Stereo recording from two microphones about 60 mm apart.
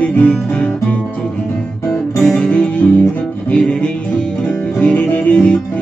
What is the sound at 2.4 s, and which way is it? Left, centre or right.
Music, left.